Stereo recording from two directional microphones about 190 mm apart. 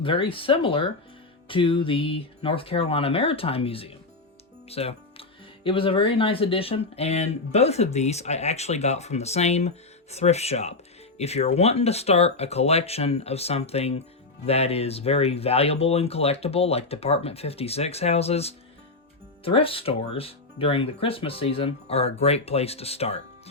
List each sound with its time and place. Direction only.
0.0 s speech: 25° left (ahead or behind)
4.7 s music: 30° left (ahead or behind)
5.6 s speech: 30° left (ahead or behind)